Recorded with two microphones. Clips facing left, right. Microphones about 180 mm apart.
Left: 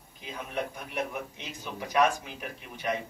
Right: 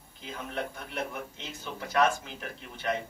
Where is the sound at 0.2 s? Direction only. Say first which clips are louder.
Left 1 dB; 15° left (ahead or behind).